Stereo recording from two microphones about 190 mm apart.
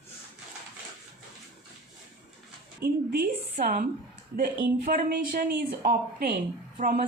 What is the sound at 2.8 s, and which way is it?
A woman's voice, 50° right (ahead or behind).